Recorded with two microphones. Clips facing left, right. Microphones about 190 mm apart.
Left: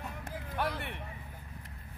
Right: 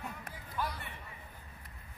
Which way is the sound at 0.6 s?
65° left (ahead or behind).